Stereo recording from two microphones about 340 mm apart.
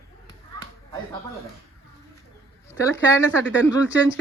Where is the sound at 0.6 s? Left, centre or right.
Centre.